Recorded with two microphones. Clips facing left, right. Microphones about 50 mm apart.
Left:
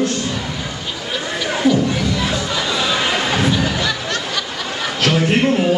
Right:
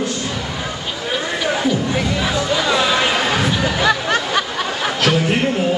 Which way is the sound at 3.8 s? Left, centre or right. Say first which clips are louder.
Right 5 dB; right.